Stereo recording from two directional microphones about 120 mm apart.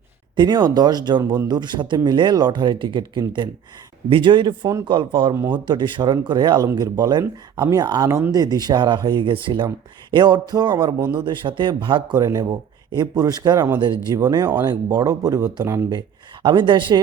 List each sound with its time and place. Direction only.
0.3 s speech: 35° right (ahead or behind)
1.2 s speech: 20° right (ahead or behind)
1.5 s speech: 40° right (ahead or behind)
12.1 s speech: 30° right (ahead or behind)
15.9 s speech: 40° right (ahead or behind)